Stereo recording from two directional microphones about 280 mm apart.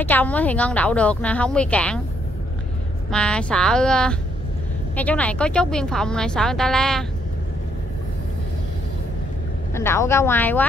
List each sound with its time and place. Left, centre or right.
0.0 s speech: centre
3.1 s speech: centre
9.8 s speech: centre